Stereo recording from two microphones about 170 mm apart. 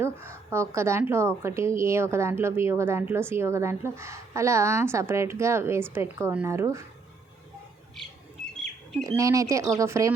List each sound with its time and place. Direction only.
0.0 s speech: 15° right (ahead or behind)
9.0 s speech: 20° right (ahead or behind)